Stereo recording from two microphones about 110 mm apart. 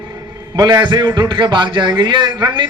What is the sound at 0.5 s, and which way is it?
A man's voice, 40° right (ahead or behind).